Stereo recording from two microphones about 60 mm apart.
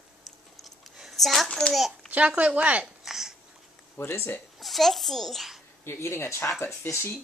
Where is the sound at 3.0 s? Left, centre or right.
Centre.